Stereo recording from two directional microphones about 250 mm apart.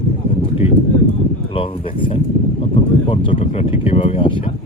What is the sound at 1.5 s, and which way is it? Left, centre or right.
Speech, left.